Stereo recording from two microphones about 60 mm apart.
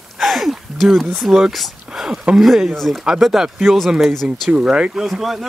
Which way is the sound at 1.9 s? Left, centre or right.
Centre.